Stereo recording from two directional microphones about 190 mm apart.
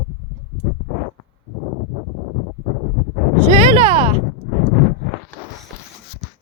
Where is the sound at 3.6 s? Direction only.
35° right (ahead or behind).